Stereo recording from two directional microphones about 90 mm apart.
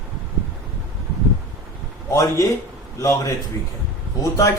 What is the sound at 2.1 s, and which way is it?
Speech, 40° left (ahead or behind).